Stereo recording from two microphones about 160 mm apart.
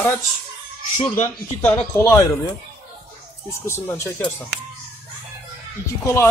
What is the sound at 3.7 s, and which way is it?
Speech, 15° left (ahead or behind).